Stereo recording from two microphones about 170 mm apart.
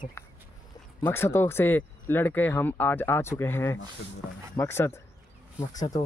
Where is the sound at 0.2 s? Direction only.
15° left (ahead or behind).